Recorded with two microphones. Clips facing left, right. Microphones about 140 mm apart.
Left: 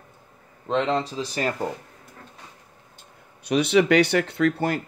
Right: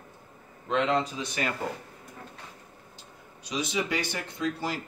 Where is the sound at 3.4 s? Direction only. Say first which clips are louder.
Left 11 dB; 65° left (ahead or behind).